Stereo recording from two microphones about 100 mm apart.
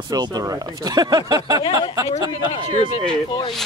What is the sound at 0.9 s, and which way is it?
Speech, 45° right (ahead or behind).